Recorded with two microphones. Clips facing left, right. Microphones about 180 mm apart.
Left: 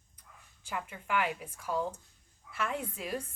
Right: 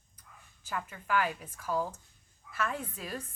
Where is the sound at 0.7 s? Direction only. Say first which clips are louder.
Right 1 dB; 15° left (ahead or behind).